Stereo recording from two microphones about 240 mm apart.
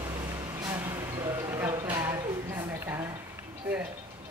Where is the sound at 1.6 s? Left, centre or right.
Centre.